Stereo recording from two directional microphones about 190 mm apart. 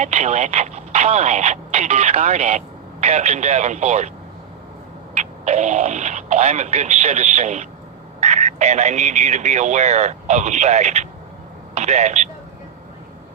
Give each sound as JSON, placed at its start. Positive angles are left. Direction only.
{"t": 0.0, "sound": "speech", "side_deg": -35}
{"t": 5.1, "sound": "a man's voice", "side_deg": -35}